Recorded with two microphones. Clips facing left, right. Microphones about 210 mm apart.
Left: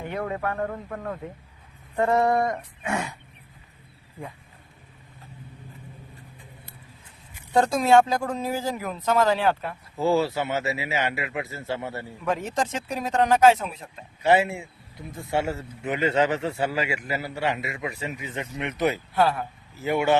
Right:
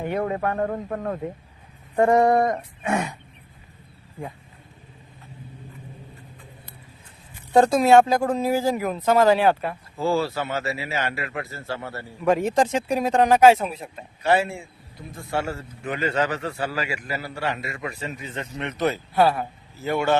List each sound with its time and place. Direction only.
0.1 s speech: 30° right (ahead or behind)
2.0 s speech: 15° right (ahead or behind)
2.3 s a sound: 50° right (ahead or behind)
7.7 s speech: 5° right (ahead or behind)
10.0 s speech: 20° left (ahead or behind)
12.3 s speech: 10° right (ahead or behind)
14.2 s a man's voice: 20° left (ahead or behind)
19.1 s speech: 10° right (ahead or behind)
19.8 s speech: 15° left (ahead or behind)